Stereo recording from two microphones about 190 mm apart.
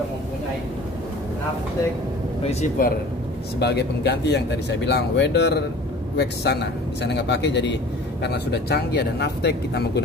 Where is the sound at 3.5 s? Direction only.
60° left (ahead or behind).